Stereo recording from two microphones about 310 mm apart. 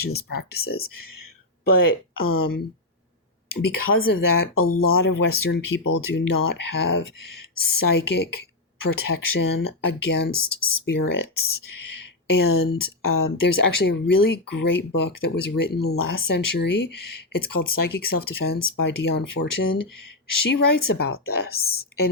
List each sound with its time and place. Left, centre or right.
0.5 s speech: left
0.9 s speech: left
4.5 s speech: left
4.8 s speech: left